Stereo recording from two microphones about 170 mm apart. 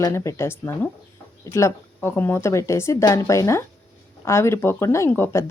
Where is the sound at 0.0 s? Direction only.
15° left (ahead or behind).